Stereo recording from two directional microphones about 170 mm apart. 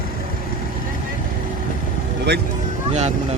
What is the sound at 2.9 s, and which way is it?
Speech, 40° right (ahead or behind).